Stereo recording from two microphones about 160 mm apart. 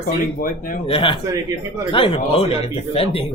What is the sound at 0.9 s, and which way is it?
Speech, 35° left (ahead or behind).